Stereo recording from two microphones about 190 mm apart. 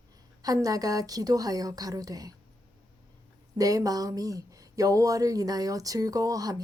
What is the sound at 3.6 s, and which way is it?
Speech, 20° right (ahead or behind).